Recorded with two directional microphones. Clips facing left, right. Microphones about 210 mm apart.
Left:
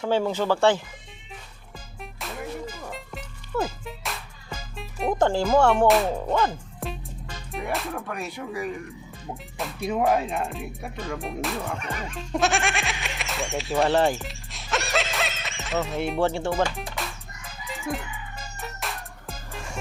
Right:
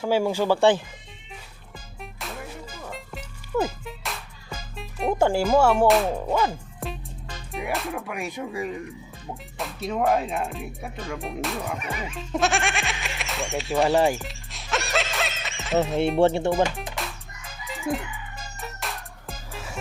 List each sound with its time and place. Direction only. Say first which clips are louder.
0.0 s speech: right 1 dB; 10° right (ahead or behind)
2.0 s music: left 1 dB; centre (ahead or behind)
8.1 s speech: right 1 dB; 15° right (ahead or behind)
9.3 s speech: even; centre (ahead or behind)
9.8 s speech: even; 10° left (ahead or behind)
11.7 s speech: right 1 dB; 10° right (ahead or behind)
14.1 s music: right 1 dB; centre (ahead or behind)
16.2 s speech: right 2 dB; 20° right (ahead or behind)
17.0 s chicken: even; centre (ahead or behind)
18.6 s music: even; centre (ahead or behind)